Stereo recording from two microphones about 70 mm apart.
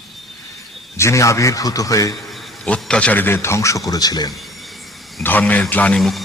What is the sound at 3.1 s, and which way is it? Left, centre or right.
A man's voice, left.